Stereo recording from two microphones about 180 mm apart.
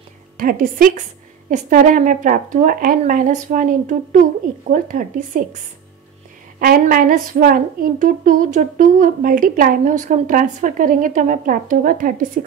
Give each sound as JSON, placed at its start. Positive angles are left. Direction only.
{"t": 0.4, "sound": "speech", "side_deg": -50}
{"t": 6.6, "sound": "speech", "side_deg": -55}